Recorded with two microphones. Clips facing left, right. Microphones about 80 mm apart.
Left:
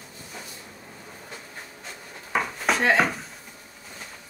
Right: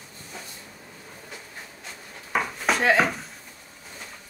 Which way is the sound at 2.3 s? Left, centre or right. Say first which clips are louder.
Even; centre.